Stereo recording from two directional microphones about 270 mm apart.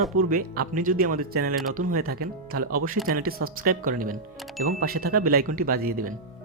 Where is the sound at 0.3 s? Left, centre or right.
Right.